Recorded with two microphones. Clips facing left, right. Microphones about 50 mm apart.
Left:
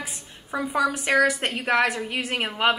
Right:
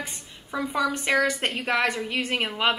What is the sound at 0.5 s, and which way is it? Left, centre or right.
Speech, left.